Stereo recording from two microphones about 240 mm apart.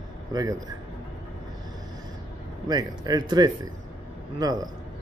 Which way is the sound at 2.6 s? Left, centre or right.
Centre.